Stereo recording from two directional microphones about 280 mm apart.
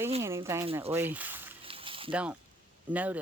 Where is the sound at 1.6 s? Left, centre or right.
Centre.